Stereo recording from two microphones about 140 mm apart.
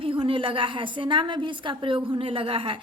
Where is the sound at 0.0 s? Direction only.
40° right (ahead or behind).